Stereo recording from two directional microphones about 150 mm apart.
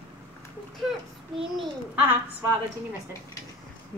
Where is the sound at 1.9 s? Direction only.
15° right (ahead or behind).